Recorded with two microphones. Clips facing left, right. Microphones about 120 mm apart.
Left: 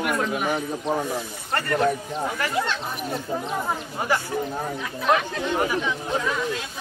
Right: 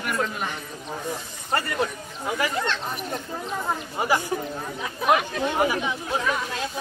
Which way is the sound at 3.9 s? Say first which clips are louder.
Right 2 dB; 10° right (ahead or behind).